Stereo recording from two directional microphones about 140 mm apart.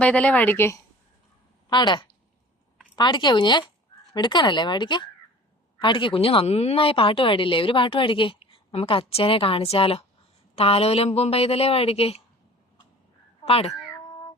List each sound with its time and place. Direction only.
0.0 s speech: 10° left (ahead or behind)
1.7 s a woman's voice: 30° left (ahead or behind)
13.4 s speech: 45° left (ahead or behind)